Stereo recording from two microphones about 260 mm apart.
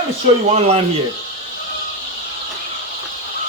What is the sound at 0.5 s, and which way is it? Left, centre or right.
Speech, right.